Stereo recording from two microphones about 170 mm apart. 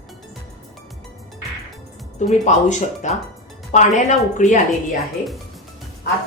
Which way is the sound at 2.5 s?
45° left (ahead or behind).